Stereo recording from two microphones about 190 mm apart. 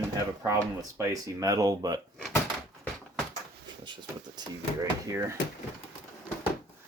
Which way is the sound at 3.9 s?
25° right (ahead or behind).